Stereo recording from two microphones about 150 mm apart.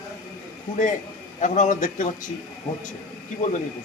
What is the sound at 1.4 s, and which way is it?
Speech, 55° left (ahead or behind).